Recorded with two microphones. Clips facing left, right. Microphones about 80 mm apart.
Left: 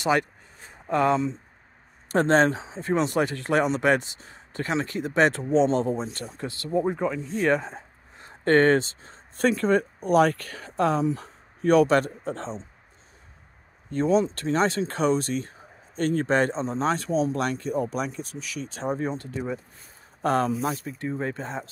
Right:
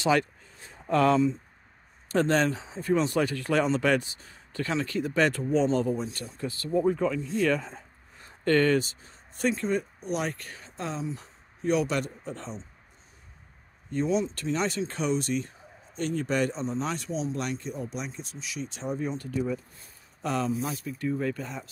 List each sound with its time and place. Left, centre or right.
0.8 s speech: centre
9.4 s speech: left
13.9 s speech: left
21.0 s speech: left